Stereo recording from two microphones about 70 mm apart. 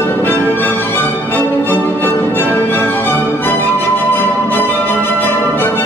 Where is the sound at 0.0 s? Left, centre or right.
Left.